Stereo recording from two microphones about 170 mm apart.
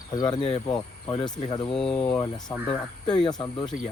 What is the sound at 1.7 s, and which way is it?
Speech, 5° left (ahead or behind).